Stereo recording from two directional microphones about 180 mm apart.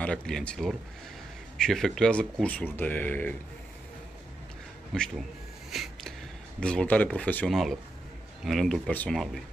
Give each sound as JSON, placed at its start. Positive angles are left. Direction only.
{"t": 0.0, "sound": "speech", "side_deg": 5}
{"t": 4.9, "sound": "speech", "side_deg": 5}
{"t": 5.7, "sound": "a sound", "side_deg": 0}
{"t": 6.6, "sound": "speech", "side_deg": 5}